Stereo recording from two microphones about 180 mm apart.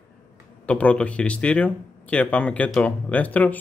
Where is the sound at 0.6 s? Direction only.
5° left (ahead or behind).